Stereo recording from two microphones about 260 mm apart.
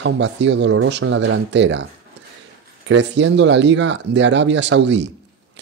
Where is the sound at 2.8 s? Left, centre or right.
Right.